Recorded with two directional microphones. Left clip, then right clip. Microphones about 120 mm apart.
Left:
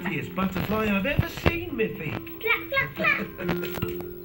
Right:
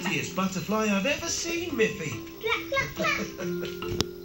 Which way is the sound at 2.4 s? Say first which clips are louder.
Left 3 dB; 35° right (ahead or behind).